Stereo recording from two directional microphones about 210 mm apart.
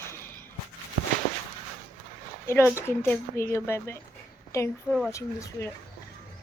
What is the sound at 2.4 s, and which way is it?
A woman's voice, 10° left (ahead or behind).